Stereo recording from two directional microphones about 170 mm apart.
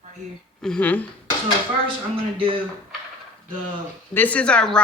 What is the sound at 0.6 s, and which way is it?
Speech, 5° left (ahead or behind).